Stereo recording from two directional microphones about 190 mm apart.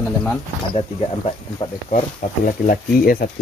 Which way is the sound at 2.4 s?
45° left (ahead or behind).